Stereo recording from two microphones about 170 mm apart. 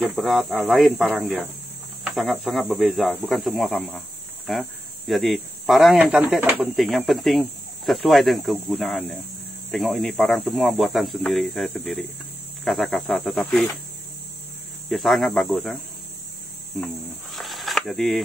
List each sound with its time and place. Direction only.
0.0 s speech: centre (ahead or behind)
14.9 s speech: centre (ahead or behind)
16.7 s cricket: centre (ahead or behind)